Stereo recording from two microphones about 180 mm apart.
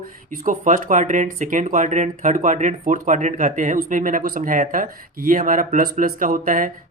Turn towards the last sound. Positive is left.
turn(degrees=-50)  # may be behind; listen again after turning